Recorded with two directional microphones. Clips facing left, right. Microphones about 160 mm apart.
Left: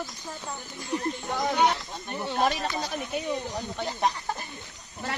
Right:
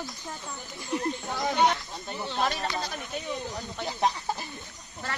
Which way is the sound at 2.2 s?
15° left (ahead or behind).